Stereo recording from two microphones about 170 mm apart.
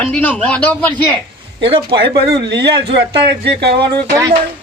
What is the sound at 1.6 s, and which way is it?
Speech, 30° right (ahead or behind).